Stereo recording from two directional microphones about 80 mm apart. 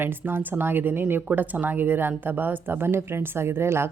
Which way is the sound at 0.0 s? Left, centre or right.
Right.